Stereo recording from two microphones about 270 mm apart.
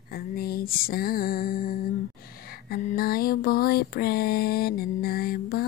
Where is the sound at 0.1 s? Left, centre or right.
Left.